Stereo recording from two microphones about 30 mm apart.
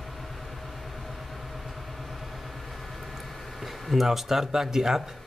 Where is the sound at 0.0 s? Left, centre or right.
Centre.